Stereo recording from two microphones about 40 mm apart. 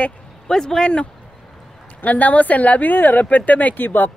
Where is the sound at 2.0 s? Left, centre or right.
Left.